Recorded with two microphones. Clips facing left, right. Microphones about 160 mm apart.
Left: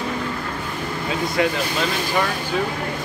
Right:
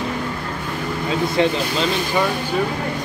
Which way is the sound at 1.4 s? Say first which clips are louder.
Right 2 dB; 25° right (ahead or behind).